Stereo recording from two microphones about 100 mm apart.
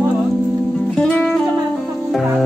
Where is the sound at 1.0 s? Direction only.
10° left (ahead or behind).